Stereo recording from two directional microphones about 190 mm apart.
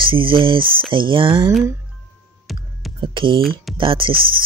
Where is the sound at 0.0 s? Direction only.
25° right (ahead or behind).